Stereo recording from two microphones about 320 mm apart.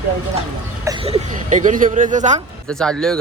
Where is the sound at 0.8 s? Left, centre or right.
Centre.